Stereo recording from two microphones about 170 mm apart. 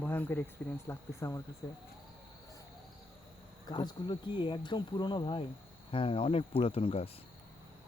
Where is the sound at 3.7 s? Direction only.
25° left (ahead or behind).